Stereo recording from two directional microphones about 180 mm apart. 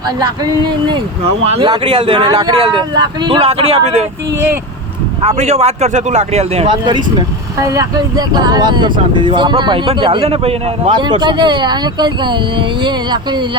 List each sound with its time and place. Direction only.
0.9 s speech: 30° right (ahead or behind)
5.4 s speech: 35° right (ahead or behind)